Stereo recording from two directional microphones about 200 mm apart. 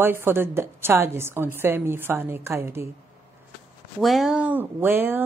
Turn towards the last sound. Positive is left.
turn(degrees=-10)  # may be behind; listen again after turning